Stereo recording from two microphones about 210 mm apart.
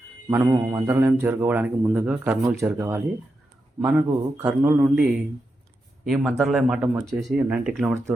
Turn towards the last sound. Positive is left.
turn(degrees=0)  # may be behind; listen again after turning